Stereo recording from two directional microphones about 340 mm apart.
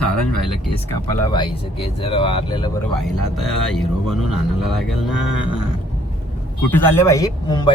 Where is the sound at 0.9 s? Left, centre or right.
Centre.